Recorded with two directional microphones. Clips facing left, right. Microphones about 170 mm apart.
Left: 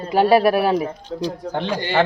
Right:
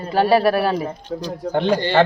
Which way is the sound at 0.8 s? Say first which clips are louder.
Left 1 dB; centre (ahead or behind).